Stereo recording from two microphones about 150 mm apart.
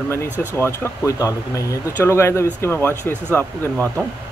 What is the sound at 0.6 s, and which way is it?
Speech, 20° left (ahead or behind).